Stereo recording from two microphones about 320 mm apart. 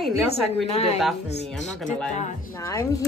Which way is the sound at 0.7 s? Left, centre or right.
Centre.